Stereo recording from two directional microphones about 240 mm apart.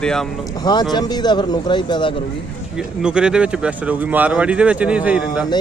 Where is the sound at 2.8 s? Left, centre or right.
Centre.